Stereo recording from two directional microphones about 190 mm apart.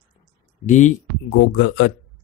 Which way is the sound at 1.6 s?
65° left (ahead or behind).